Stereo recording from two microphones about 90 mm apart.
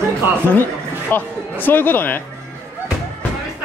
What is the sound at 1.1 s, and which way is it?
Speech, 20° left (ahead or behind).